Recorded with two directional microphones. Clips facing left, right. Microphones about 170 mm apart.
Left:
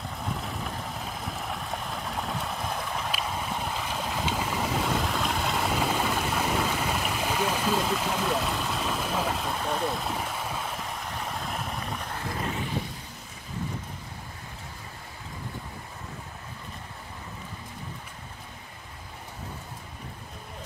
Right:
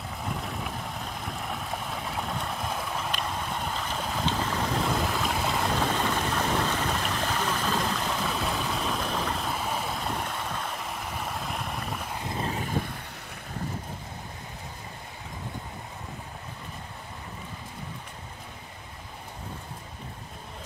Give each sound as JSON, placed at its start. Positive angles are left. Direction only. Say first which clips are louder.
{"t": 0.2, "sound": "vehicle", "louder": "even", "side_deg": 0}
{"t": 12.4, "sound": "vehicle", "louder": "right 2 dB", "side_deg": -45}